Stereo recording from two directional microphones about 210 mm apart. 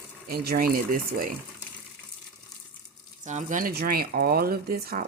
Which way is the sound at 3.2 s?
35° right (ahead or behind).